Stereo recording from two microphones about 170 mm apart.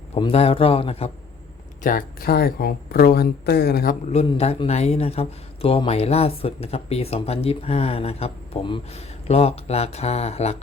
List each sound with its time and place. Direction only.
0.1 s speech: 35° left (ahead or behind)
1.8 s speech: 55° left (ahead or behind)
4.1 s speech: 35° left (ahead or behind)